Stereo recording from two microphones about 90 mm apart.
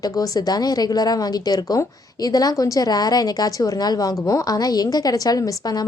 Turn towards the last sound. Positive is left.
turn(degrees=45)  # may be behind; listen again after turning